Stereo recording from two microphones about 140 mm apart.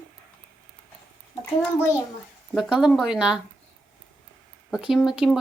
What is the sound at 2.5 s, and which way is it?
Speech, centre (ahead or behind).